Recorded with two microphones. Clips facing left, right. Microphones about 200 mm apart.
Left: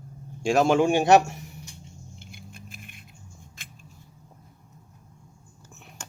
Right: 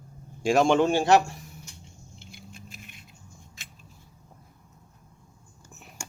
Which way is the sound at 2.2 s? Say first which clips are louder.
Right 2 dB; 55° left (ahead or behind).